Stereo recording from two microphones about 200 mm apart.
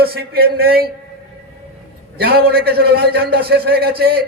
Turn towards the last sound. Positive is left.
turn(degrees=-50)  # may be behind; listen again after turning